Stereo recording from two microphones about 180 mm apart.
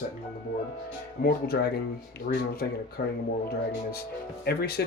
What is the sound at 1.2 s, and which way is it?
Speech, 60° left (ahead or behind).